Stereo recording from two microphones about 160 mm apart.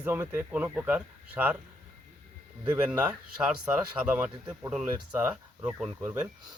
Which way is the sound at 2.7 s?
10° right (ahead or behind).